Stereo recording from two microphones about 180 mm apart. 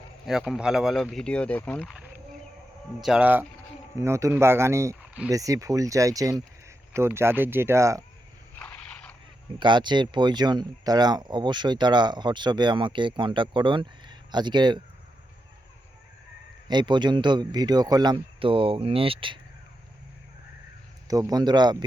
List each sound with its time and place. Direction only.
0.3 s speech: centre (ahead or behind)
3.0 s speech: 5° right (ahead or behind)
8.5 s a sound: 5° left (ahead or behind)
9.6 s speech: 25° right (ahead or behind)
16.6 s speech: 25° right (ahead or behind)
21.1 s speech: 20° right (ahead or behind)